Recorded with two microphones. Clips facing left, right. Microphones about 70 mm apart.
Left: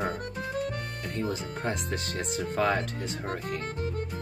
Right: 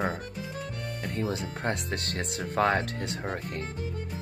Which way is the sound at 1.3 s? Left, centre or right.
Right.